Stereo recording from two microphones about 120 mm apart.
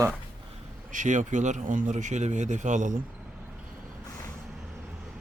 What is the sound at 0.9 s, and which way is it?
Speech, 90° right.